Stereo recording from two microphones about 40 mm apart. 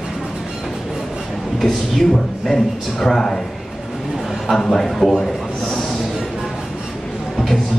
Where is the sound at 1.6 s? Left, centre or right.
Centre.